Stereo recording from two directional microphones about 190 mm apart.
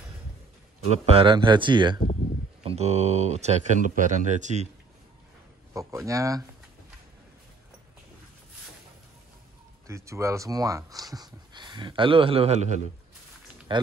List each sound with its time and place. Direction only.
0.8 s a man's voice: 35° right (ahead or behind)
5.7 s speech: 15° right (ahead or behind)
9.8 s speech: 15° right (ahead or behind); by 12.8 s 35° right (ahead or behind)
13.7 s speech: 25° right (ahead or behind)